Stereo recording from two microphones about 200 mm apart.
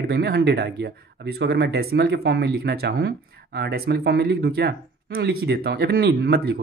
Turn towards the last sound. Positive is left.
turn(degrees=-55)  # may be behind; listen again after turning